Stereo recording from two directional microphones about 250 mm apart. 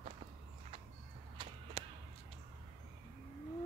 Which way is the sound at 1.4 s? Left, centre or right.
Centre.